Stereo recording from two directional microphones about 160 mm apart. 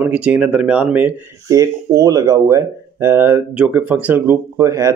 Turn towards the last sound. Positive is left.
turn(degrees=-20)  # may be behind; listen again after turning